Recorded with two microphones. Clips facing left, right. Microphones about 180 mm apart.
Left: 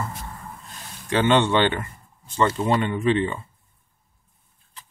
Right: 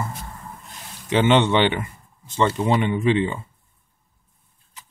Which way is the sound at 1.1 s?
20° right (ahead or behind).